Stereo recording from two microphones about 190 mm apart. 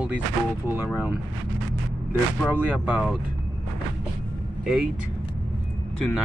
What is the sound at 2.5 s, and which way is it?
Speech, 5° right (ahead or behind).